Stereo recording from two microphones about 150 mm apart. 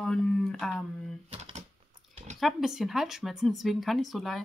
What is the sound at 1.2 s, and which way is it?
Typewriter, 40° right (ahead or behind).